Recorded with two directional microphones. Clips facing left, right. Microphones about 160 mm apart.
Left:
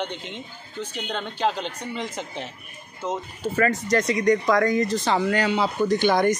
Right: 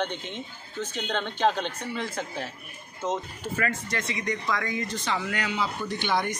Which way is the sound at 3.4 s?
35° left (ahead or behind).